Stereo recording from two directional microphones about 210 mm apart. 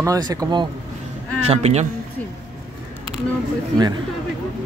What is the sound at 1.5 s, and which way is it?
Speech, 30° right (ahead or behind).